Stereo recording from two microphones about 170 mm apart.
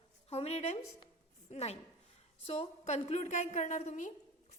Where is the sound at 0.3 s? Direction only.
35° left (ahead or behind).